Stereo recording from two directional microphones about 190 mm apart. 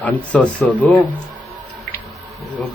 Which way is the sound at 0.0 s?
10° left (ahead or behind).